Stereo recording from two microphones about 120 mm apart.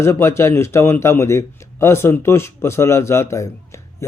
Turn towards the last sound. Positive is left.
turn(degrees=25)  # may be behind; listen again after turning